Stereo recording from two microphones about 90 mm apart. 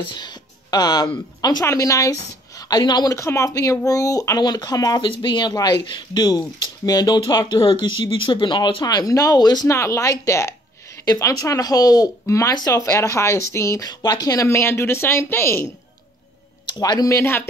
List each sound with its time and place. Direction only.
0.1 s speech: 55° left (ahead or behind)
1.7 s a woman's voice: 35° left (ahead or behind)
3.2 s speech: 35° left (ahead or behind)
5.0 s speech: 60° left (ahead or behind)
5.5 s speech: 45° left (ahead or behind)
7.6 s speech: 65° left (ahead or behind); by 9.7 s 50° left (ahead or behind)
9.7 s a woman's voice: 35° left (ahead or behind)
13.8 s speech: 45° left (ahead or behind); by 15.7 s 30° left (ahead or behind)
16.6 s speech: 50° left (ahead or behind)
17.1 s speech: 25° left (ahead or behind)